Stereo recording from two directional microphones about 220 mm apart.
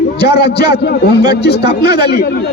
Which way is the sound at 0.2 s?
50° left (ahead or behind).